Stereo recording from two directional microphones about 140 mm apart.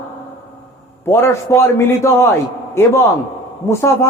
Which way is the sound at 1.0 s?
20° left (ahead or behind).